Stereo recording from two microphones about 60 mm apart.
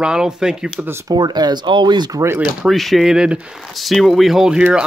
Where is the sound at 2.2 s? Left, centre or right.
Right.